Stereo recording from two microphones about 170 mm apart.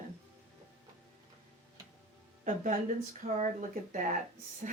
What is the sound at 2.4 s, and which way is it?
Speech, 45° right (ahead or behind).